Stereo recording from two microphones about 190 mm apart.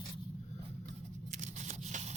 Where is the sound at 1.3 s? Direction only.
40° right (ahead or behind).